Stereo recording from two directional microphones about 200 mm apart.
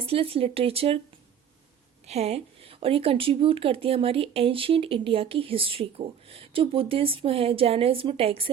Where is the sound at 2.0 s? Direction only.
30° right (ahead or behind).